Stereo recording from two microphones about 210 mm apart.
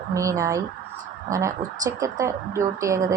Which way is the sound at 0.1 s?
15° right (ahead or behind).